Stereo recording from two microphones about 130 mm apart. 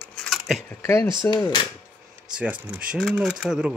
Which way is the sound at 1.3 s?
35° left (ahead or behind).